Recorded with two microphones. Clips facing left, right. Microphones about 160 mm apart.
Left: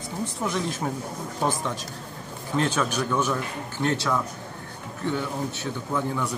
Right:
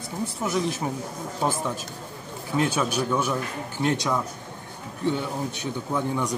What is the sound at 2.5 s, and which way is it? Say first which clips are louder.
A man's voice: right 1 dB; 15° right (ahead or behind).